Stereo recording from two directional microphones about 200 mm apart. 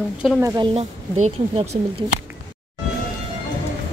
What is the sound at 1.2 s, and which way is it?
Speech, 35° right (ahead or behind).